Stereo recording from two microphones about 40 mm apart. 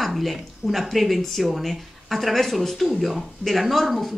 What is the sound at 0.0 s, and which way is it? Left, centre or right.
A woman's voice, centre.